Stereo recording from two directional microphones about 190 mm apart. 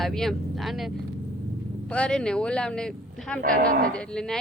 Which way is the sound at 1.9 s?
5° left (ahead or behind).